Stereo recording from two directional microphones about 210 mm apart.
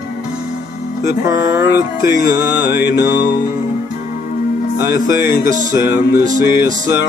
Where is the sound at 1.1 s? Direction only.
55° left (ahead or behind).